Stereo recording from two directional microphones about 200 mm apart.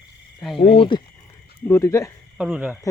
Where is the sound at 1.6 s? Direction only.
15° left (ahead or behind).